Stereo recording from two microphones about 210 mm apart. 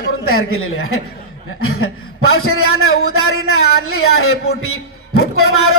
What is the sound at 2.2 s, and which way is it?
A man's voice, 90° left.